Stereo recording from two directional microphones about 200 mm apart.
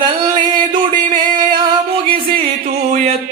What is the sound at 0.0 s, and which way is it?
Music, 20° right (ahead or behind).